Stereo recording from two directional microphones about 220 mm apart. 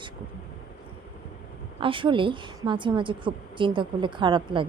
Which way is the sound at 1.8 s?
25° right (ahead or behind).